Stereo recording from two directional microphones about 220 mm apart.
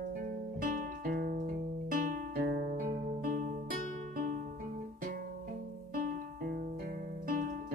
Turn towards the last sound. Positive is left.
turn(degrees=-40)  # may be behind; listen again after turning